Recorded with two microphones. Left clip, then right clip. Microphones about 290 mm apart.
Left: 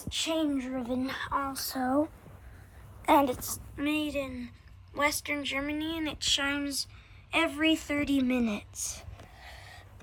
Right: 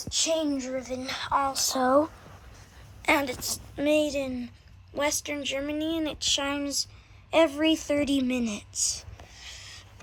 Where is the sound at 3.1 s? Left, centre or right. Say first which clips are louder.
Left 1 dB; centre.